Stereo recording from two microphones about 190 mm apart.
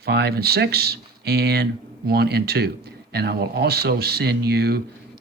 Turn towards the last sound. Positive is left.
turn(degrees=-55)  # may be behind; listen again after turning